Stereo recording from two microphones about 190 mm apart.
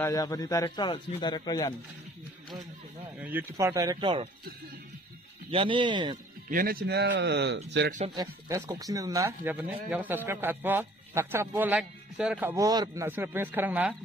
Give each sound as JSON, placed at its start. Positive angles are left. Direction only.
{"t": 0.0, "sound": "speech", "side_deg": 15}
{"t": 3.2, "sound": "speech", "side_deg": -10}
{"t": 5.5, "sound": "speech", "side_deg": -30}
{"t": 6.5, "sound": "a man's voice", "side_deg": -50}
{"t": 8.1, "sound": "speech", "side_deg": -15}